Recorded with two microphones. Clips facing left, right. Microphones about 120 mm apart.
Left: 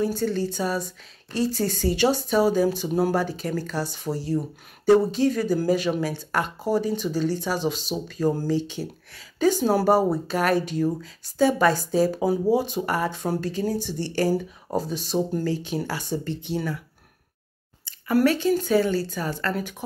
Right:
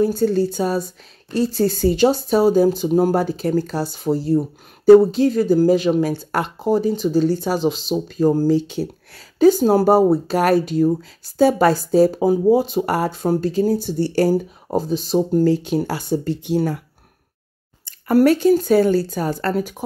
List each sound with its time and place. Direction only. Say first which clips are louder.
0.0 s a woman's voice: right 7 dB; 35° right (ahead or behind)
17.8 s speech: right 6 dB; 40° right (ahead or behind)